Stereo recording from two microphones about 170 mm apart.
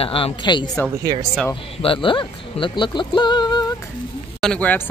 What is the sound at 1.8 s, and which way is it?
Speech, 30° left (ahead or behind).